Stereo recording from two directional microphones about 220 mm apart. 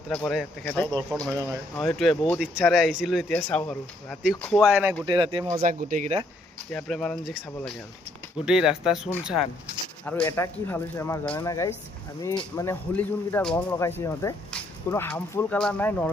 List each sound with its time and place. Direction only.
0.1 s speech: centre (ahead or behind)
5.0 s speech: 20° right (ahead or behind)
5.6 s speech: 35° right (ahead or behind)
6.7 s speech: 5° left (ahead or behind)